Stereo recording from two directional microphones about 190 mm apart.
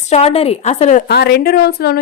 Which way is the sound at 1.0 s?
60° left (ahead or behind).